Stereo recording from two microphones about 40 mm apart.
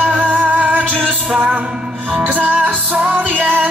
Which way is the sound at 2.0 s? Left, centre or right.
Right.